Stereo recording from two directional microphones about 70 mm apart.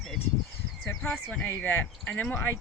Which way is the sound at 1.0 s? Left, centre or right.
Left.